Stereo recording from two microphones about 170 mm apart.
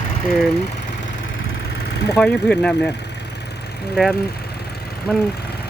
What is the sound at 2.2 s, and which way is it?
Speech, 5° left (ahead or behind).